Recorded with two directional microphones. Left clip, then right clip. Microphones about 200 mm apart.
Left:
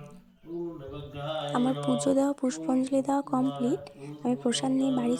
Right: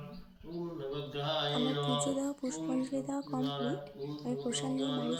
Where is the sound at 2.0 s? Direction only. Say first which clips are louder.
Left 9 dB; 40° left (ahead or behind).